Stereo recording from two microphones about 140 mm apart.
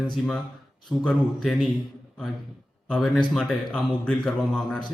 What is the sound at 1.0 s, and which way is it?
Speech, 5° left (ahead or behind).